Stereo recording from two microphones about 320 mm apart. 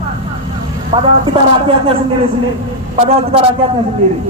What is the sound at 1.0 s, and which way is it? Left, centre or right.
Speech, centre.